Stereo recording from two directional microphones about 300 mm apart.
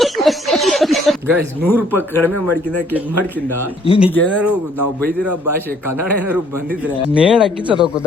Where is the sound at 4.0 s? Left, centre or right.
Centre.